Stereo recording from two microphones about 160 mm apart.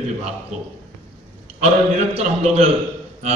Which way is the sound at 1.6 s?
45° right (ahead or behind).